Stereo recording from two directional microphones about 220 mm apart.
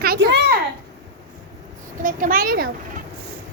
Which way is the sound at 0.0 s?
45° right (ahead or behind).